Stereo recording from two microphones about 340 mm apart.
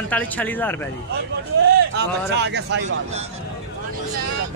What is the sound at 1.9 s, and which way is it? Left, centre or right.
Speech, right.